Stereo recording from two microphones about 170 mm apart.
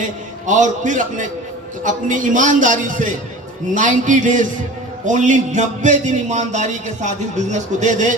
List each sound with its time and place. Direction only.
0.0 s a man's voice: 45° right (ahead or behind)